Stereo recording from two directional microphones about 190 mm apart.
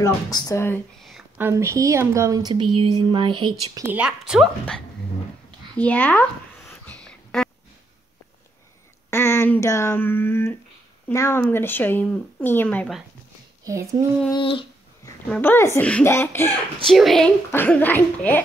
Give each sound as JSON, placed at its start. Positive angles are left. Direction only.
{"t": 0.0, "sound": "speech", "side_deg": 20}
{"t": 1.4, "sound": "a woman's voice", "side_deg": -15}
{"t": 3.8, "sound": "speech", "side_deg": -10}
{"t": 6.9, "sound": "a sound", "side_deg": 5}
{"t": 9.1, "sound": "speech", "side_deg": 15}
{"t": 13.7, "sound": "speech", "side_deg": -15}
{"t": 14.3, "sound": "a sound", "side_deg": 25}
{"t": 15.2, "sound": "speech", "side_deg": 10}
{"t": 16.8, "sound": "speech", "side_deg": 0}